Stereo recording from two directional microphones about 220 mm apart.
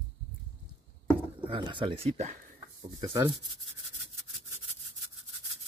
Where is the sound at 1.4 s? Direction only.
20° right (ahead or behind).